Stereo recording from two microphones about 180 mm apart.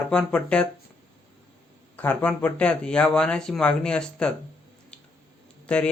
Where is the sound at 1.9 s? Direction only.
10° left (ahead or behind).